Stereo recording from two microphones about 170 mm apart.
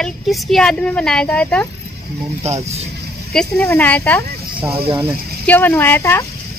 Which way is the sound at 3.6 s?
10° left (ahead or behind).